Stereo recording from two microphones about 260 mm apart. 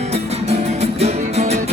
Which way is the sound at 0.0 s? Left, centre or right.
Right.